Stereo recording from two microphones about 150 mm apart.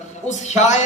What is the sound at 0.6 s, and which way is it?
Speech, 50° left (ahead or behind).